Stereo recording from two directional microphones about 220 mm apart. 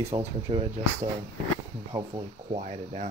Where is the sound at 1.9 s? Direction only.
20° right (ahead or behind).